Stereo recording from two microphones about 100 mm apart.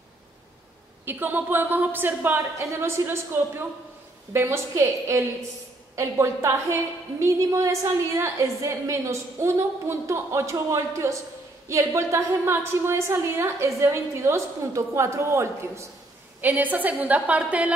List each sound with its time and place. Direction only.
1.0 s a woman's voice: 20° right (ahead or behind)
16.3 s a woman's voice: 15° right (ahead or behind)